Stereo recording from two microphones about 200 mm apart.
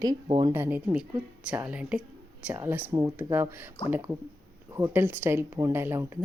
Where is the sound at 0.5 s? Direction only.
10° right (ahead or behind).